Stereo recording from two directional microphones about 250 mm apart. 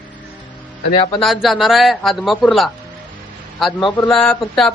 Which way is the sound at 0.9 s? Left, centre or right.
Left.